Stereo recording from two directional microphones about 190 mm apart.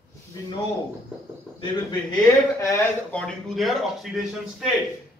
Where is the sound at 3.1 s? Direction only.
5° left (ahead or behind).